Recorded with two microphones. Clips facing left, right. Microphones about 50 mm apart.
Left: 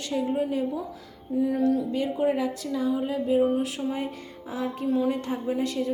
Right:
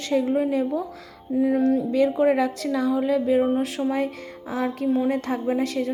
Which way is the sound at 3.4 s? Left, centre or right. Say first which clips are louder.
Right 3 dB; right.